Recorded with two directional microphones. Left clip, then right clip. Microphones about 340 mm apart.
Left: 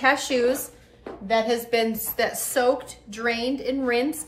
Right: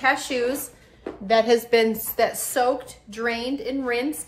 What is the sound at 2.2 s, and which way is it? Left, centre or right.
A woman's voice, centre.